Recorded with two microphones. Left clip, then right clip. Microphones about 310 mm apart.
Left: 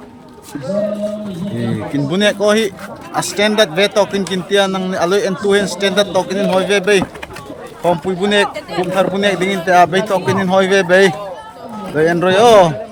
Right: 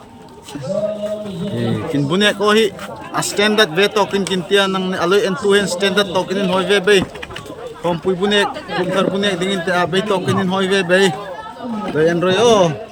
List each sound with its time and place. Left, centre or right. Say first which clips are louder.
1.9 s speech: left 1 dB; centre